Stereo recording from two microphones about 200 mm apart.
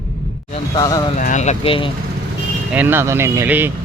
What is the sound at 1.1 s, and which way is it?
Speech, 40° left (ahead or behind).